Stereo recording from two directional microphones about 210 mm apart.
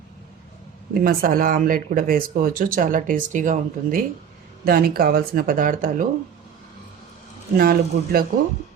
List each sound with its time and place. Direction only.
0.9 s speech: 45° right (ahead or behind)
7.5 s speech: 45° right (ahead or behind)